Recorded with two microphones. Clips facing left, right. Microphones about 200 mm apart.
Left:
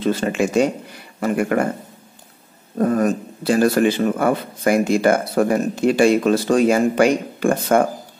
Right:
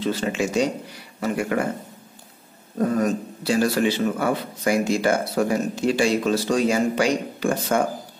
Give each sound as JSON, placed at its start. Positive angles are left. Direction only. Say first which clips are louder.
{"t": 0.0, "sound": "a man's voice", "louder": "left 4 dB", "side_deg": 50}
{"t": 2.8, "sound": "a man's voice", "louder": "left 3 dB", "side_deg": 55}